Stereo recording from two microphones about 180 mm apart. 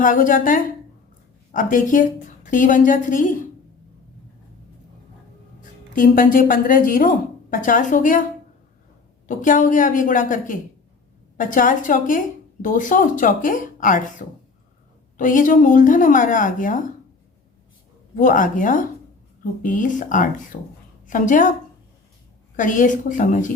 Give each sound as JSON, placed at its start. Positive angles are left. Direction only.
{"t": 0.0, "sound": "a woman's voice", "side_deg": 50}
{"t": 5.9, "sound": "a woman's voice", "side_deg": 50}
{"t": 9.2, "sound": "a woman's voice", "side_deg": 45}
{"t": 18.2, "sound": "a woman's voice", "side_deg": 50}
{"t": 22.5, "sound": "a woman's voice", "side_deg": 45}